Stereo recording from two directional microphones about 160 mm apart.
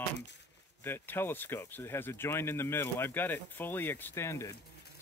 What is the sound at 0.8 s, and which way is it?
Speech, 15° left (ahead or behind).